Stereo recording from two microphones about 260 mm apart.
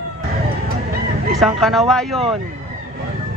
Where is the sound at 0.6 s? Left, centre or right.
Right.